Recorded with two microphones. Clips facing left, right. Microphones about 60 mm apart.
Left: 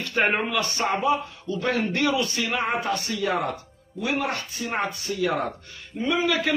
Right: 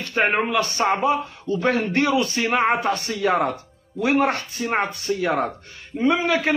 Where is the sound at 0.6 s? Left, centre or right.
Right.